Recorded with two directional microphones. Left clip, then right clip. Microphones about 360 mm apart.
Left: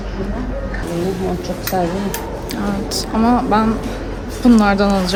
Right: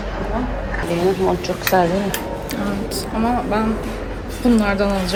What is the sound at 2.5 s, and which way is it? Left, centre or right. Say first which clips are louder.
A woman's voice: left 5 dB; centre.